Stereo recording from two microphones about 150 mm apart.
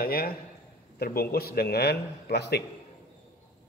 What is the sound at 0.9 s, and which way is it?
Speech, 90° left.